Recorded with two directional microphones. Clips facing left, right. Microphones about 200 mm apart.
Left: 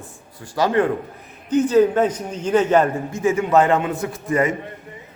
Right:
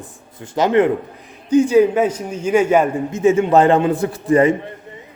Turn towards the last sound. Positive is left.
turn(degrees=-30)  # may be behind; listen again after turning